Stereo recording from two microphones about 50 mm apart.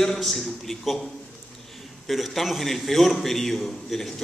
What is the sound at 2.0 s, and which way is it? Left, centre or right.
A man's voice, centre.